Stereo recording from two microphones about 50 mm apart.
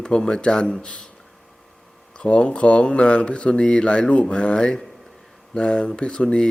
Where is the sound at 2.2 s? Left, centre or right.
Left.